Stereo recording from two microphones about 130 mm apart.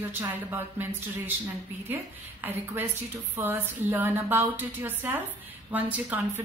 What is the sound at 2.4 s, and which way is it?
A woman's voice, 15° right (ahead or behind).